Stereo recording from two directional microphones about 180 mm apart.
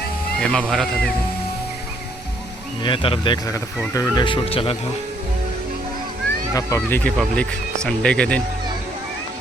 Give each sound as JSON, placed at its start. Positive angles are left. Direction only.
{"t": 0.3, "sound": "speech", "side_deg": 5}
{"t": 2.8, "sound": "speech", "side_deg": 30}
{"t": 6.5, "sound": "speech", "side_deg": 15}